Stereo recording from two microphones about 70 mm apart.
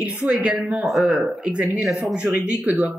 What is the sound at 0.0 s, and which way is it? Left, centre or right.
Speech, centre.